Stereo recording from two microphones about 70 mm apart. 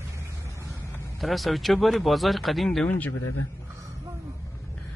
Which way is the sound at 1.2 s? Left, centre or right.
Centre.